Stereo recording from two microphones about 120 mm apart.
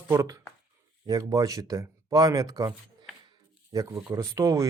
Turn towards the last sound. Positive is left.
turn(degrees=-30)  # may be behind; listen again after turning